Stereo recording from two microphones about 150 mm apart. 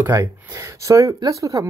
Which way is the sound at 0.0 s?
20° right (ahead or behind).